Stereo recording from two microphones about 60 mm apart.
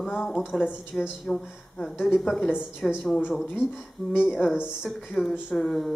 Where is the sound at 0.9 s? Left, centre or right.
Left.